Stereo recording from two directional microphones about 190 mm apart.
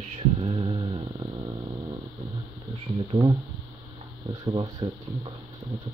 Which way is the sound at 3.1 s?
20° right (ahead or behind).